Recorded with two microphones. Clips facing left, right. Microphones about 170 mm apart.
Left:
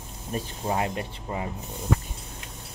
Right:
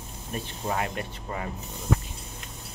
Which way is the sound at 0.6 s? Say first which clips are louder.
Left 2 dB; 25° left (ahead or behind).